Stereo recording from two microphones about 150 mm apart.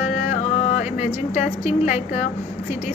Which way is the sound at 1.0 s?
50° left (ahead or behind).